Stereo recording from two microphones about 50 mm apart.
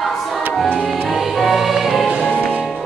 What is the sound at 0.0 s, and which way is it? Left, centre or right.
Music, centre.